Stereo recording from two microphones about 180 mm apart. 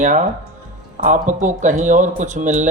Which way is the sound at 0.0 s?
45° right (ahead or behind).